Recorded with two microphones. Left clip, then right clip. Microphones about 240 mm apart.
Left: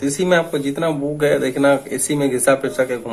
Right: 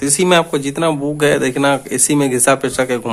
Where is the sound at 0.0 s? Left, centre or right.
Right.